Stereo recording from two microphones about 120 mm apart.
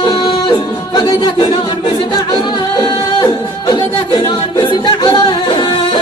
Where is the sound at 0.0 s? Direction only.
40° left (ahead or behind).